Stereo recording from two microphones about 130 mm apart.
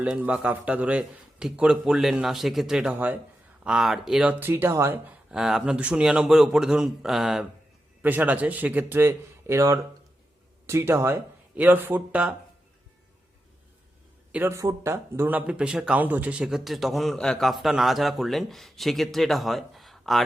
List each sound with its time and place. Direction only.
0.0 s a man's voice: 10° right (ahead or behind)
5.3 s speech: 5° right (ahead or behind)
8.0 s a man's voice: 15° right (ahead or behind)
14.3 s speech: 20° right (ahead or behind); by 20.2 s centre (ahead or behind)